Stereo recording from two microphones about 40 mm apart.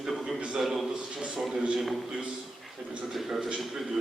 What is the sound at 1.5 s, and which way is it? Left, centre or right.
Speech, right.